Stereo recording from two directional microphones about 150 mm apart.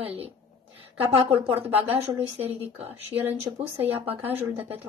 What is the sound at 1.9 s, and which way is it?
Speech, 40° right (ahead or behind).